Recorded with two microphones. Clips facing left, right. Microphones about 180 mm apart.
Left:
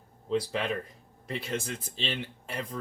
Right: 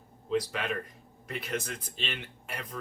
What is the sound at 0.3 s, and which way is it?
Speech, 30° left (ahead or behind).